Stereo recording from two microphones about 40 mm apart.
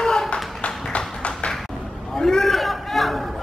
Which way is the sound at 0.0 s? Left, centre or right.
Centre.